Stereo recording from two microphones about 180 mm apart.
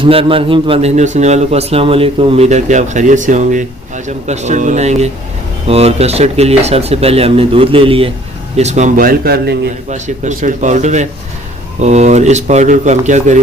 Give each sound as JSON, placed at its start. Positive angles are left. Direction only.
{"t": 0.0, "sound": "speech", "side_deg": -30}
{"t": 9.9, "sound": "speech", "side_deg": -40}